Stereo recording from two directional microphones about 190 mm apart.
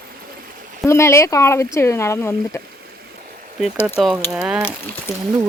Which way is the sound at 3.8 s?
5° right (ahead or behind).